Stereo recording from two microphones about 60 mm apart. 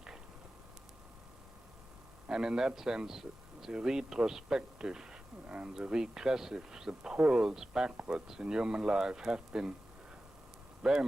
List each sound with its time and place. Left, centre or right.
2.2 s speech: centre
10.8 s speech: centre